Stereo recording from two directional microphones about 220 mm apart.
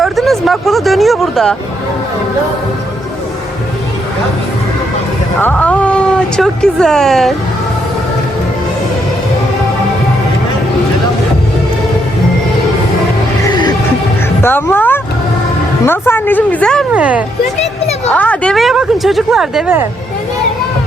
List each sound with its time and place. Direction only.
0.0 s a sound: centre (ahead or behind)
5.4 s a woman's voice: 5° left (ahead or behind)
13.5 s music: 20° left (ahead or behind)
14.4 s a woman's voice: 10° left (ahead or behind); by 17.2 s 5° right (ahead or behind)
17.6 s a sound: 30° left (ahead or behind)
18.1 s a woman's voice: 5° left (ahead or behind)